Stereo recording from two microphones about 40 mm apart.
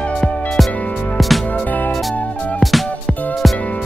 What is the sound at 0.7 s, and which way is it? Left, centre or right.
Music, left.